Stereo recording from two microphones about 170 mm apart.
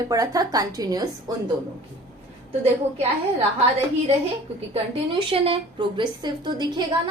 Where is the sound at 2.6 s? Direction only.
35° right (ahead or behind).